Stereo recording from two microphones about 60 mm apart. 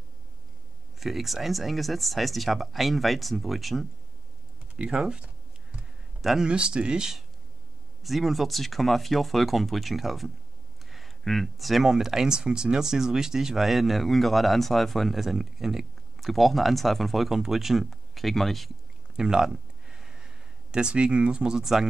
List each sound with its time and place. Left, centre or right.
0.9 s speech: centre
4.7 s computer keyboard: centre
6.4 s speech: centre
19.1 s a sound: centre